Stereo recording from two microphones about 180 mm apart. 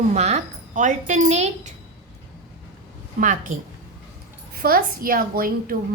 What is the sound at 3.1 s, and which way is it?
Speech, 50° right (ahead or behind).